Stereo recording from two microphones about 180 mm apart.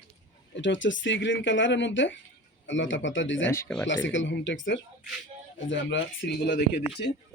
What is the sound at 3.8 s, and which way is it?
Speech, 90° left.